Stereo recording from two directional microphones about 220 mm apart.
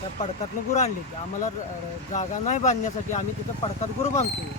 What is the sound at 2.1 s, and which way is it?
Speech, 30° left (ahead or behind).